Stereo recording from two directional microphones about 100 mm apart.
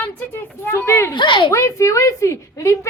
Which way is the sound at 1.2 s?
50° left (ahead or behind).